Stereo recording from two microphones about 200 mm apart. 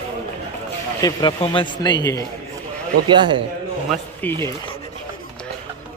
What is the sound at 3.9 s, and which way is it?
Speech, 10° left (ahead or behind).